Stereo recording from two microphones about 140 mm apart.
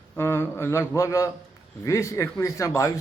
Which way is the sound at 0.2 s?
15° left (ahead or behind).